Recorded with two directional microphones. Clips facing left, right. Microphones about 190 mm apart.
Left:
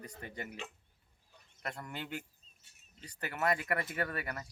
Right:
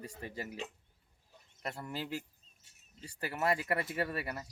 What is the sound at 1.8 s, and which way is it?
Speech, 30° right (ahead or behind).